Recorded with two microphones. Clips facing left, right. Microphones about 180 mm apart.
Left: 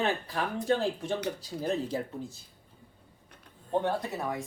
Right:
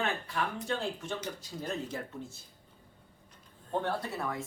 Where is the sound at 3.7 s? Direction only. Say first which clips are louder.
Left 4 dB; 20° left (ahead or behind).